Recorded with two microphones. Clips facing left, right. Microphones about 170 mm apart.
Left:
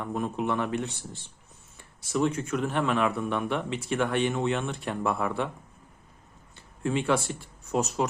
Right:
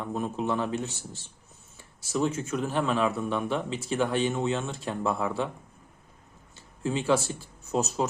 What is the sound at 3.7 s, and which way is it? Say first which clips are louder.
Speech: left 1 dB; 30° right (ahead or behind).